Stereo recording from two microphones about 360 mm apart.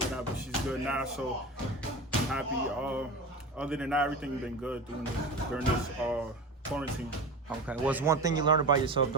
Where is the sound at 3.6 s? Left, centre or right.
Centre.